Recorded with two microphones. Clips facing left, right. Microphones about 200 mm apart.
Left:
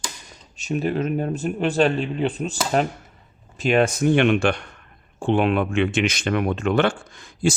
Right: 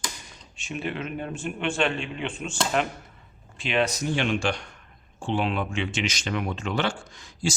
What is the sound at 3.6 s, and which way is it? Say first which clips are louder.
Speech: left 7 dB; 45° left (ahead or behind).